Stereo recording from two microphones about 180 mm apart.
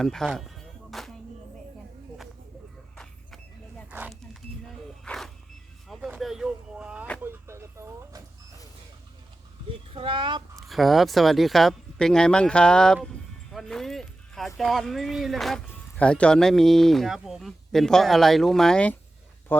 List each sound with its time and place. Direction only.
0.0 s music: 5° left (ahead or behind)
2.9 s a sound: 5° left (ahead or behind)
5.0 s music: 5° left (ahead or behind)
5.9 s a sound: centre (ahead or behind)
7.2 s vehicle: 15° right (ahead or behind)
9.9 s speech: 30° right (ahead or behind)
10.7 s speech: centre (ahead or behind)
13.5 s music: centre (ahead or behind)
14.6 s speech: centre (ahead or behind)